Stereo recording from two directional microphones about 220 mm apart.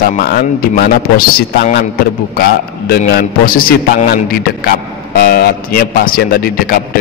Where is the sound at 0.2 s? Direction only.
45° left (ahead or behind).